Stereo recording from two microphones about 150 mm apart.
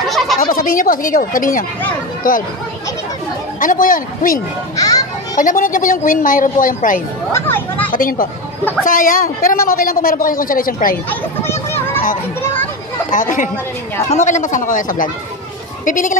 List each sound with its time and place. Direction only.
0.4 s a man's voice: 70° left (ahead or behind)
3.5 s a man's voice: 65° left (ahead or behind)
4.7 s children playing: 25° left (ahead or behind)
5.4 s a woman's voice: 65° left (ahead or behind)
7.3 s speech: 15° left (ahead or behind)
7.9 s a man's voice: 70° left (ahead or behind)
11.1 s children playing: 15° left (ahead or behind)
13.1 s a woman's voice: 60° left (ahead or behind)